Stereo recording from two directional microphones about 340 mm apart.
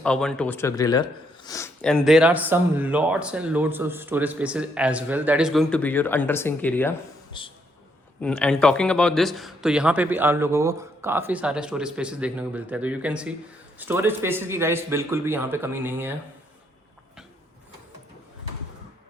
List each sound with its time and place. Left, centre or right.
0.0 s speech: centre
8.2 s a man's voice: centre